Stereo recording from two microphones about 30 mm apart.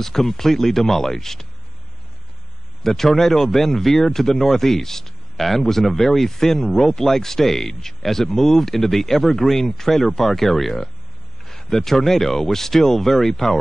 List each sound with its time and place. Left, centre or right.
0.0 s speech: centre
2.8 s speech: centre
6.7 s speech: centre
7.0 s speech: centre